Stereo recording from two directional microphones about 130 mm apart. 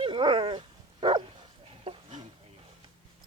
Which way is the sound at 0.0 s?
40° right (ahead or behind).